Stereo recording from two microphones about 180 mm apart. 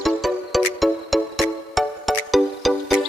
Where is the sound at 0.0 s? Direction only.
Centre (ahead or behind).